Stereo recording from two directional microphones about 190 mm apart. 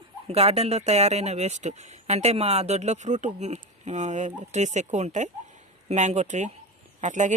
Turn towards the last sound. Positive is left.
turn(degrees=-40)  # may be behind; listen again after turning